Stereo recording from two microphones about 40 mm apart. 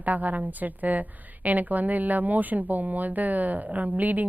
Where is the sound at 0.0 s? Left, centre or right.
Right.